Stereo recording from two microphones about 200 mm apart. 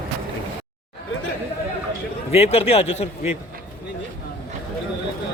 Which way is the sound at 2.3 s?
30° left (ahead or behind).